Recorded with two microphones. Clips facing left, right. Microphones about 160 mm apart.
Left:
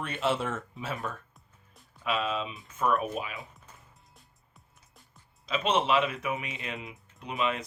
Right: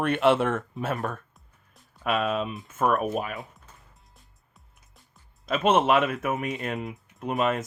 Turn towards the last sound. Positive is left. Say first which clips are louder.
# right 5 dB
turn(degrees=-45)  # may be behind; listen again after turning